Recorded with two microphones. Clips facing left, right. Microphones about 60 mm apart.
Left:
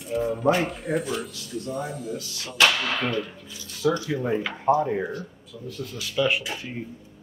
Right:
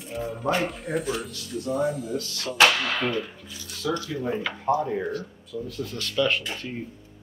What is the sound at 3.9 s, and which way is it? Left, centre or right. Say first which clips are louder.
Speech: left 3 dB; left.